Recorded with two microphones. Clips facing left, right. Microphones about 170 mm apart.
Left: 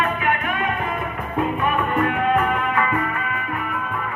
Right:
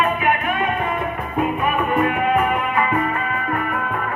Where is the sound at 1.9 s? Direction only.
10° right (ahead or behind).